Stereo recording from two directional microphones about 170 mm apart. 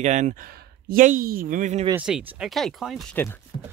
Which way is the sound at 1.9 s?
5° right (ahead or behind).